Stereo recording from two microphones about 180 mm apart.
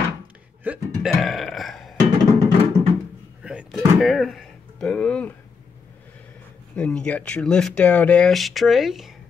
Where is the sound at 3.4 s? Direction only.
5° right (ahead or behind).